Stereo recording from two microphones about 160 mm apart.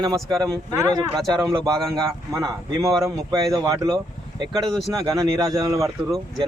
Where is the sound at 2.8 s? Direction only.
Centre (ahead or behind).